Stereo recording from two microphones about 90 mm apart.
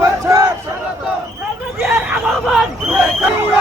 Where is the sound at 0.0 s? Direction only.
40° right (ahead or behind).